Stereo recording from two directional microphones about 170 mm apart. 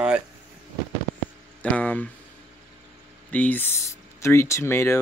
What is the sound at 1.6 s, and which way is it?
Speech, 10° left (ahead or behind).